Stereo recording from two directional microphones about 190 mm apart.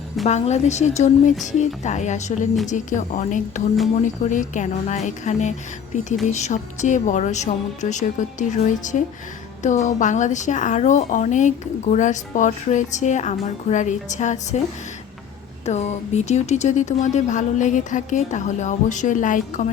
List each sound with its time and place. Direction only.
0.3 s a woman's voice: 35° left (ahead or behind)
15.6 s a woman's voice: 35° left (ahead or behind)